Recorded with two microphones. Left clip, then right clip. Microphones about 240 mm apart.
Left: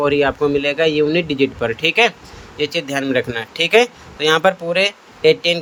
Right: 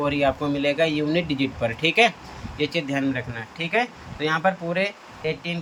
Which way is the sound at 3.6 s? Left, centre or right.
Left.